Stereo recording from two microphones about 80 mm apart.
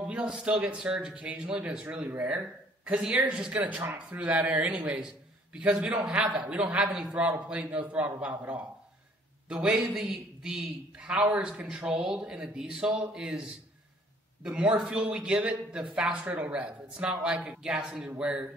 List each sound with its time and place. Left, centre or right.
0.0 s speech: centre
14.4 s speech: centre